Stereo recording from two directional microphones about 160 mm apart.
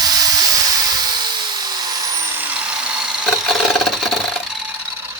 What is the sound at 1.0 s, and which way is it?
Dental drill, 30° right (ahead or behind).